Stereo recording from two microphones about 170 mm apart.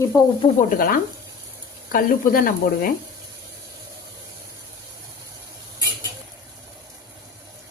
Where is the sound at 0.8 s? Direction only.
60° left (ahead or behind).